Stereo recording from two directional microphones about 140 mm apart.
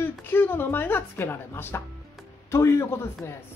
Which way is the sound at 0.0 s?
15° left (ahead or behind).